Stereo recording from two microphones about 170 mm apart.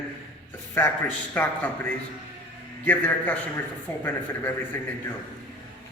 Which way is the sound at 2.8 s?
10° left (ahead or behind).